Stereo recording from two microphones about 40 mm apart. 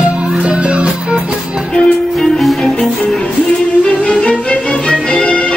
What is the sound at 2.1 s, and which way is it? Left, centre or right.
Music, centre.